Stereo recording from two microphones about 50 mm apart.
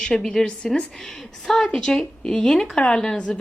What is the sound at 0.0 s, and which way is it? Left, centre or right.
Speech, centre.